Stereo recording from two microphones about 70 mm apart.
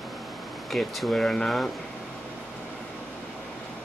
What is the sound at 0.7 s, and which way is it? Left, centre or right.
Speech, centre.